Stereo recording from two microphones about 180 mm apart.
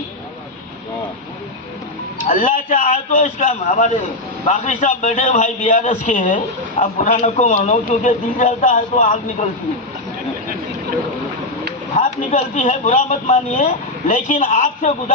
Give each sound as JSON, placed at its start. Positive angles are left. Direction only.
{"t": 2.2, "sound": "a man's voice", "side_deg": 50}
{"t": 11.9, "sound": "a man's voice", "side_deg": 45}